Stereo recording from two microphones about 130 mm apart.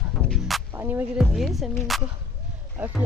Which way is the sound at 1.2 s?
Centre (ahead or behind).